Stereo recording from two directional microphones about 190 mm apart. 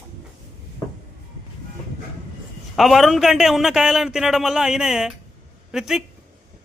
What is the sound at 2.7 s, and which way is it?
A man's voice, centre (ahead or behind).